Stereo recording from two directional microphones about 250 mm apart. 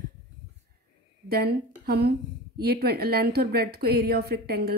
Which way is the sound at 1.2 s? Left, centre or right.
Right.